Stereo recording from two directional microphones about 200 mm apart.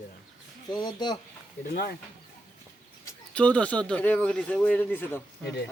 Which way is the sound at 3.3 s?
5° left (ahead or behind).